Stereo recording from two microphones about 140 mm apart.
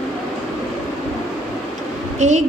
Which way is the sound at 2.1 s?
60° right (ahead or behind).